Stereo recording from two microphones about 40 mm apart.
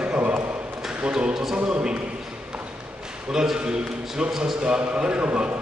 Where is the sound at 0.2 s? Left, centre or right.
Right.